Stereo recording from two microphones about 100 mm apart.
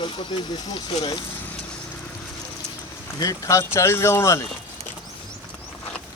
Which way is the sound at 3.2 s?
35° left (ahead or behind).